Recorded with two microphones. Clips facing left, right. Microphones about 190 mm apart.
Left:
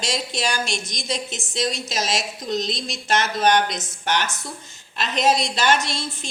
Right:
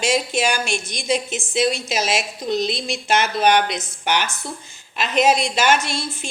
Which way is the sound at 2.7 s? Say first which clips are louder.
Right 5 dB; 60° right (ahead or behind).